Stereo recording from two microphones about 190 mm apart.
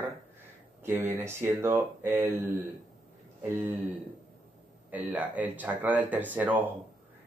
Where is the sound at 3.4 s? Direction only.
10° right (ahead or behind).